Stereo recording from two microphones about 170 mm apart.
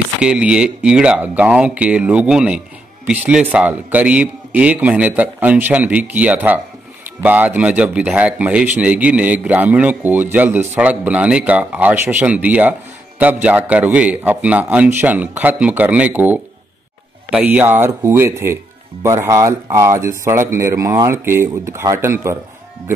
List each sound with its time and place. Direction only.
0.2 s a man's voice: 5° right (ahead or behind)